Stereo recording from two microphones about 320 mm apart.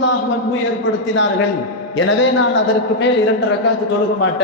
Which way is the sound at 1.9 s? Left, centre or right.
Left.